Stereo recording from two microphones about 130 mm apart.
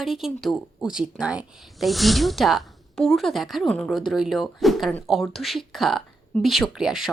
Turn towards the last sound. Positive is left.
turn(degrees=-5)  # may be behind; listen again after turning